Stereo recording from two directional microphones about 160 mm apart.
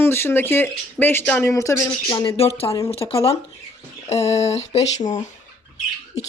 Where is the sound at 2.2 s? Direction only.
35° left (ahead or behind).